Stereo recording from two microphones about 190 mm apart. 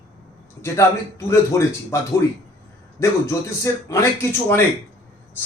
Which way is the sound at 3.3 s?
15° left (ahead or behind).